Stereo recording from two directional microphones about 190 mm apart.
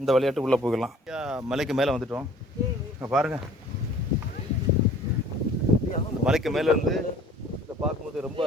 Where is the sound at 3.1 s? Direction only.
5° right (ahead or behind).